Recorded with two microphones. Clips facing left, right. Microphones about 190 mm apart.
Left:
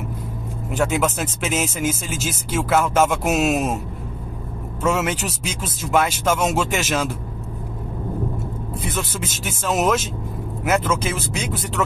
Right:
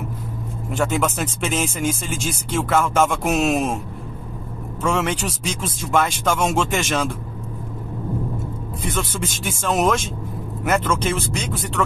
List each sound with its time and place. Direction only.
0.7 s speech: 5° left (ahead or behind)
4.8 s speech: 5° left (ahead or behind)
8.8 s speech: 5° left (ahead or behind)